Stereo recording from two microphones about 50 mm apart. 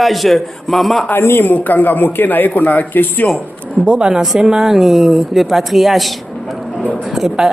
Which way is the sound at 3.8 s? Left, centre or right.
Centre.